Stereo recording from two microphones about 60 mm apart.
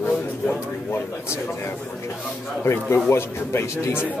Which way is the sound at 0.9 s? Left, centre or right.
Left.